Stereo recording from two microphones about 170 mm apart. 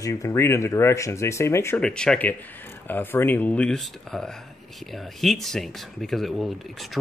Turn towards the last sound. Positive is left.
turn(degrees=0)  # may be behind; listen again after turning